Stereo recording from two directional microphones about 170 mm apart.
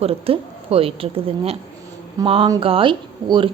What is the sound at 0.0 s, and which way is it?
A woman's voice, 35° right (ahead or behind).